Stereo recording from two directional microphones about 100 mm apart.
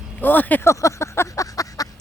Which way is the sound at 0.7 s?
30° left (ahead or behind).